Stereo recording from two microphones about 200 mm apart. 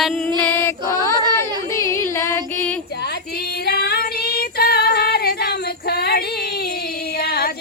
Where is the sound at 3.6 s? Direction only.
50° left (ahead or behind).